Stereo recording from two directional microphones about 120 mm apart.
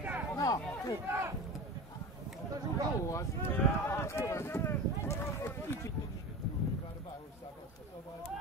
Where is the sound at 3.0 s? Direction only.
25° left (ahead or behind).